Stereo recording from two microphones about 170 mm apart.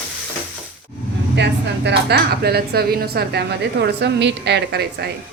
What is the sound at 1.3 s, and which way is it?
Speech, 90° right.